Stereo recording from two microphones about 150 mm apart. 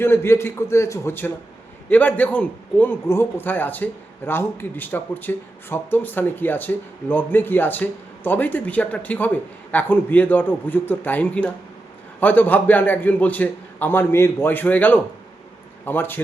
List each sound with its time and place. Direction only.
0.0 s speech: 15° left (ahead or behind)